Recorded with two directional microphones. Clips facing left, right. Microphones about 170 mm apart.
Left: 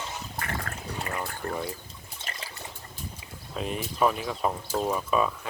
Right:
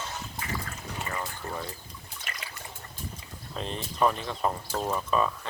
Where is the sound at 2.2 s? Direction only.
30° left (ahead or behind).